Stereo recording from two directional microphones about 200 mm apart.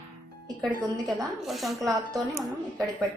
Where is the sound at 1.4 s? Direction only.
Centre (ahead or behind).